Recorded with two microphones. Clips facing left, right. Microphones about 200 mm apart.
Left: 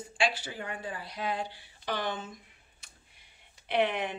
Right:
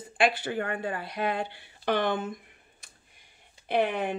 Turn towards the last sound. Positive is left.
turn(degrees=-45)  # may be behind; listen again after turning